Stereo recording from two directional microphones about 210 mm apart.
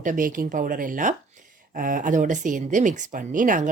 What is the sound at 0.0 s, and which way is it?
Speech, 40° right (ahead or behind).